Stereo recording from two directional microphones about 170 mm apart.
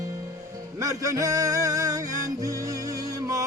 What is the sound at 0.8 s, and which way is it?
Music, 20° right (ahead or behind).